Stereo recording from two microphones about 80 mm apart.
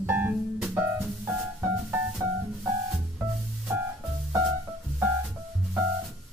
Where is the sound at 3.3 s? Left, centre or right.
Centre.